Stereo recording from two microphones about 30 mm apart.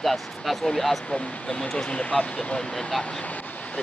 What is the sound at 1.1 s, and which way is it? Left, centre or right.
Speech, left.